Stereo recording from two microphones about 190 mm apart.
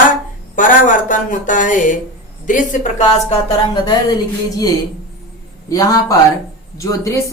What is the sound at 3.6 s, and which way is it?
A woman's voice, 25° left (ahead or behind).